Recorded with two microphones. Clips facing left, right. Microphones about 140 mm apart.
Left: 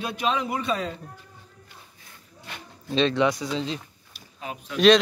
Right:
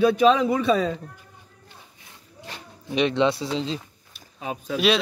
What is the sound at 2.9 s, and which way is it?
Speech, 15° right (ahead or behind).